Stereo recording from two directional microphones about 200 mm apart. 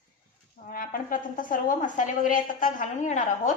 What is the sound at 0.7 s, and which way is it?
A woman's voice, 45° left (ahead or behind).